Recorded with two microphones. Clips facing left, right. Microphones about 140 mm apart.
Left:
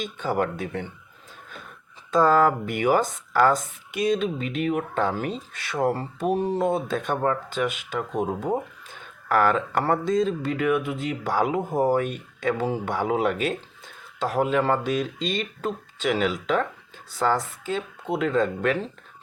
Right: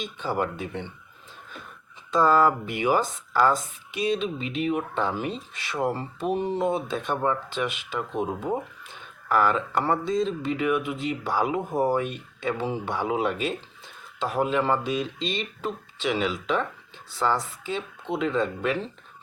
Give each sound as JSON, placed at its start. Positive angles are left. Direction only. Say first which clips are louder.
{"t": 0.0, "sound": "speech", "louder": "left 2 dB", "side_deg": 50}
{"t": 2.0, "sound": "speech", "louder": "left 1 dB", "side_deg": 50}
{"t": 9.3, "sound": "speech", "louder": "left 2 dB", "side_deg": 50}
{"t": 11.6, "sound": "speech", "louder": "left 2 dB", "side_deg": 15}
{"t": 12.0, "sound": "speech", "louder": "left 3 dB", "side_deg": 45}